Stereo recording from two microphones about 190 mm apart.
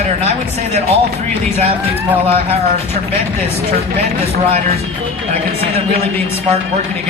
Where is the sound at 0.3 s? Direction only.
35° right (ahead or behind).